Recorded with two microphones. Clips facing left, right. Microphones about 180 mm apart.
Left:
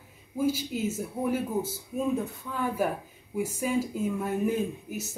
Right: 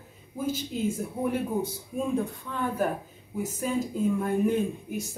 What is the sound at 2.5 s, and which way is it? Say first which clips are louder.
Speech: left 1 dB; 10° left (ahead or behind).